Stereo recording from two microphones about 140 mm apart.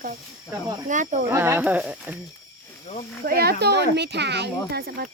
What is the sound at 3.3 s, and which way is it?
Speech, 90° right.